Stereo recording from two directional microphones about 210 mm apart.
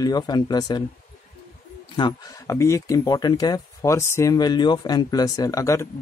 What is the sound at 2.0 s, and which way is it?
A man's voice, 20° left (ahead or behind).